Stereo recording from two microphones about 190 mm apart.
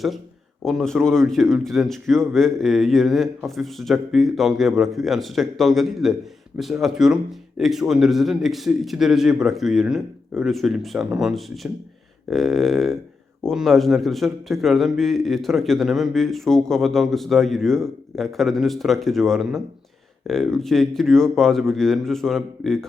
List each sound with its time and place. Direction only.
0.6 s a man's voice: centre (ahead or behind)